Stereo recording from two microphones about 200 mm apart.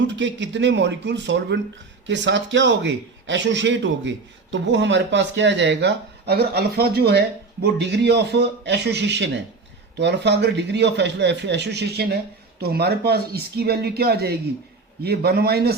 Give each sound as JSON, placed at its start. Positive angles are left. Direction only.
{"t": 0.2, "sound": "a man's voice", "side_deg": -65}